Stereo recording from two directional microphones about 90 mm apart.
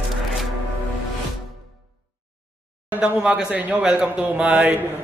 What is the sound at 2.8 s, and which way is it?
Speech, 10° right (ahead or behind).